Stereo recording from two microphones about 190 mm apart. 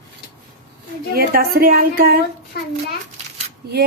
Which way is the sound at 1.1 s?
50° right (ahead or behind).